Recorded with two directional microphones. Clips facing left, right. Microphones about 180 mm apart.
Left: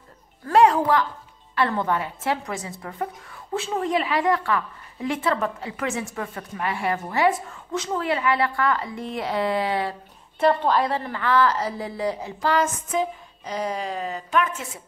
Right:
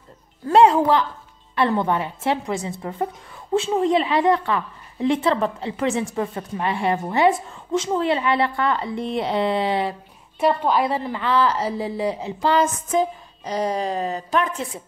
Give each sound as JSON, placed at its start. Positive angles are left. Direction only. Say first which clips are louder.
{"t": 0.5, "sound": "a woman's voice", "louder": "right 3 dB", "side_deg": -25}
{"t": 10.4, "sound": "a woman's voice", "louder": "right 1 dB", "side_deg": -10}
{"t": 12.9, "sound": "a woman's voice", "louder": "right 4 dB", "side_deg": -40}